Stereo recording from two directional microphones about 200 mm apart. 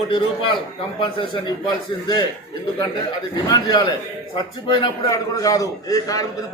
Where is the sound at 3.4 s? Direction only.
20° left (ahead or behind).